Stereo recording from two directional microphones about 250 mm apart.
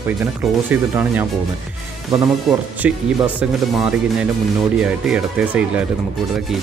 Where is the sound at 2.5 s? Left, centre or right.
Centre.